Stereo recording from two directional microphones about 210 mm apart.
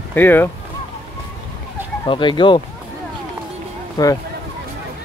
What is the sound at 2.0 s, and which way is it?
Speech, 25° left (ahead or behind).